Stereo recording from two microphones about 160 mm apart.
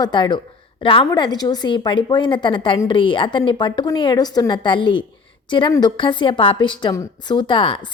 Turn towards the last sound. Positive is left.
turn(degrees=30)  # may be behind; listen again after turning